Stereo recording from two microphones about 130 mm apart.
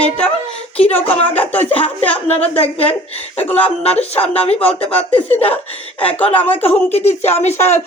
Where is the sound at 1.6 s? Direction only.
45° left (ahead or behind).